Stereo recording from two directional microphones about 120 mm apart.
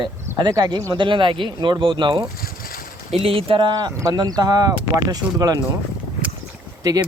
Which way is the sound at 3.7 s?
30° right (ahead or behind).